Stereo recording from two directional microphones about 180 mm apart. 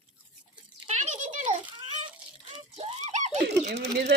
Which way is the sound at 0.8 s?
40° right (ahead or behind).